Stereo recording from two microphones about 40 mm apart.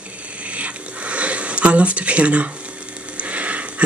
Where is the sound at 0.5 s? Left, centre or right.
Right.